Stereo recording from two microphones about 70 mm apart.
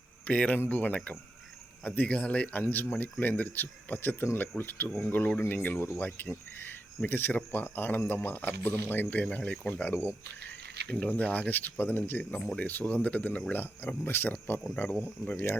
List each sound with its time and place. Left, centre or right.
0.3 s speech: left
10.8 s speech: centre